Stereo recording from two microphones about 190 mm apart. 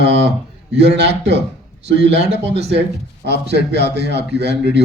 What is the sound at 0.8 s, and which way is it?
A man's voice, 60° right (ahead or behind).